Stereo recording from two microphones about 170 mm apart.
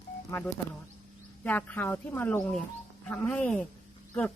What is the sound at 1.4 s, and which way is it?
Speech, 10° left (ahead or behind).